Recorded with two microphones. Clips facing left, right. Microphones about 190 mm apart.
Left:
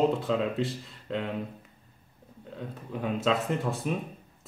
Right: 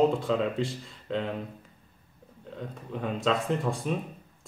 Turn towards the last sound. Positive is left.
turn(degrees=5)  # may be behind; listen again after turning